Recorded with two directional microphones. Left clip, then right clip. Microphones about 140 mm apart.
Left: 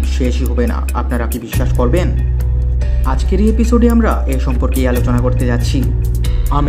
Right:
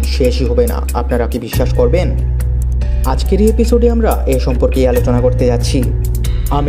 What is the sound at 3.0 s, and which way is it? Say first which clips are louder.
Speech: right 4 dB; 35° right (ahead or behind).